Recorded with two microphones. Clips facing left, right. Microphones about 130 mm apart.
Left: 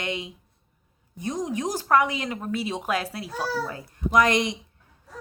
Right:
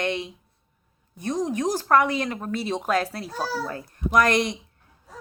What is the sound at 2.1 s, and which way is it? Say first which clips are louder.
Speech: right 2 dB; 40° right (ahead or behind).